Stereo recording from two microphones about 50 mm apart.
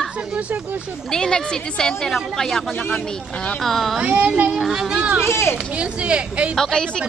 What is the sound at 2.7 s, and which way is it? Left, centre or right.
Speech, left.